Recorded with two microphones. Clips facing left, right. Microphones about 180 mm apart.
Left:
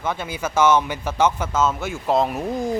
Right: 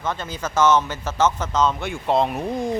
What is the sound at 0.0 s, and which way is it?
Speech, 10° left (ahead or behind).